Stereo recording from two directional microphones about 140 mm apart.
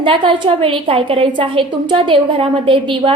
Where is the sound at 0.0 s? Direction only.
40° right (ahead or behind).